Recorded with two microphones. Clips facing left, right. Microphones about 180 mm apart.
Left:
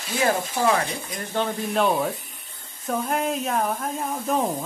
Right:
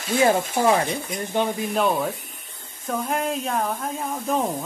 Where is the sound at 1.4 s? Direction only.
5° right (ahead or behind).